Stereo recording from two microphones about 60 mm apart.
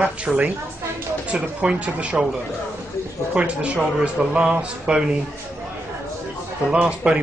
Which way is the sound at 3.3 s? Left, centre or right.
Centre.